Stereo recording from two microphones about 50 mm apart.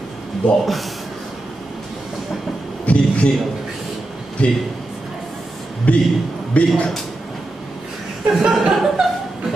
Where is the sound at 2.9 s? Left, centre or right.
Left.